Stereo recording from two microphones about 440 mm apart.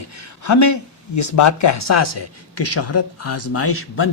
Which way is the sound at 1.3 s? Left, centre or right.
Left.